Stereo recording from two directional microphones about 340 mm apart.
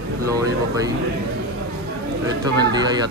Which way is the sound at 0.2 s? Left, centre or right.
Centre.